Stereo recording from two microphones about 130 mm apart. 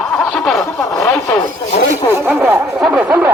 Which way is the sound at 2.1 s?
20° right (ahead or behind).